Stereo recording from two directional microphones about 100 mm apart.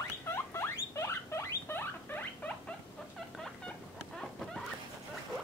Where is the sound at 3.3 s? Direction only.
5° left (ahead or behind).